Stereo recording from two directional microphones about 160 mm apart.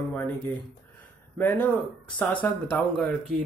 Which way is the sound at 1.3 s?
10° left (ahead or behind).